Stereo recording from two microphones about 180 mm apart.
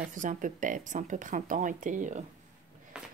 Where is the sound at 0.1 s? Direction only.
45° right (ahead or behind).